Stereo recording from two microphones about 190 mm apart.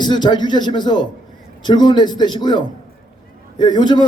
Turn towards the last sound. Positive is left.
turn(degrees=20)  # may be behind; listen again after turning